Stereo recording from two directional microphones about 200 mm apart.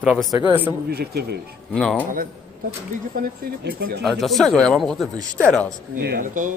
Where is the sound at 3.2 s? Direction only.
50° right (ahead or behind).